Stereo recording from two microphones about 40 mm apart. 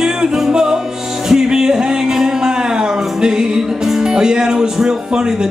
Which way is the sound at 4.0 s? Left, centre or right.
Centre.